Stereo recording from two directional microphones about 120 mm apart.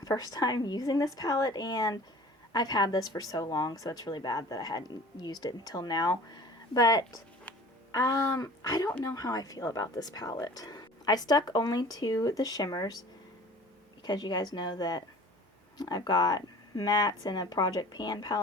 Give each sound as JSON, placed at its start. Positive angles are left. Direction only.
{"t": 0.0, "sound": "speech", "side_deg": 30}
{"t": 14.0, "sound": "speech", "side_deg": 35}